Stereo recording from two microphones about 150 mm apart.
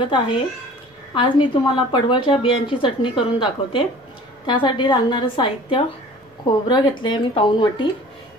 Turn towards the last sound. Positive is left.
turn(degrees=30)  # may be behind; listen again after turning